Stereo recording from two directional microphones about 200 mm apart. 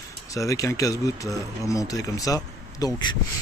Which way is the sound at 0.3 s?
15° left (ahead or behind).